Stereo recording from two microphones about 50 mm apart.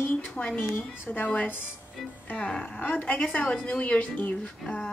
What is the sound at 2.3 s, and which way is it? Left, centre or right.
Speech, left.